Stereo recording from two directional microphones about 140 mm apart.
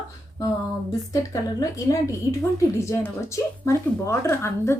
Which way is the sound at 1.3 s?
25° left (ahead or behind).